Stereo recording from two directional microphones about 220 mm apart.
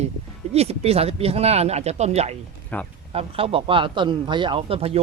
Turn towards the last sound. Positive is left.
turn(degrees=-25)  # may be behind; listen again after turning